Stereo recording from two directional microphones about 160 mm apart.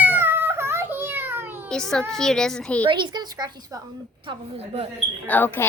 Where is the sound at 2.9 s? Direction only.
30° right (ahead or behind).